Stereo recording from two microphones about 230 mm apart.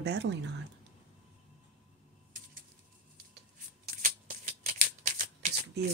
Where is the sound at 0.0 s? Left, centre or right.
Right.